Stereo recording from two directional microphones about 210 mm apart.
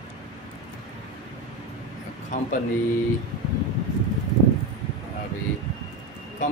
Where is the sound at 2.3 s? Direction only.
35° left (ahead or behind).